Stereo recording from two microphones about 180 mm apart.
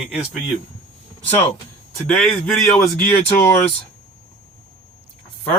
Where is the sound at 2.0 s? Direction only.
5° left (ahead or behind).